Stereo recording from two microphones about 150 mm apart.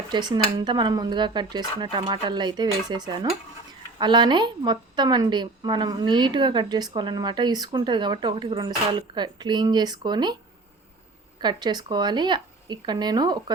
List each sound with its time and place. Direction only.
0.1 s a woman's voice: 30° right (ahead or behind)
3.1 s stir: 35° right (ahead or behind)
3.9 s a woman's voice: 30° right (ahead or behind)
11.3 s a woman's voice: 30° right (ahead or behind)